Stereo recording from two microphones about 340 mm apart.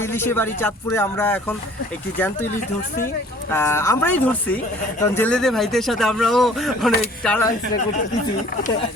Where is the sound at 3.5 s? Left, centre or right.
Centre.